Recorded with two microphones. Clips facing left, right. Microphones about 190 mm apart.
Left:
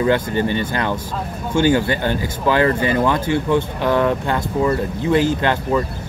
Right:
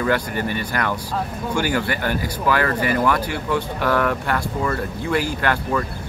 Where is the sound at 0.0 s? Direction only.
25° left (ahead or behind).